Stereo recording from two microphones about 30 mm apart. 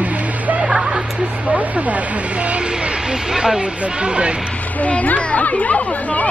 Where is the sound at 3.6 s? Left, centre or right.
Right.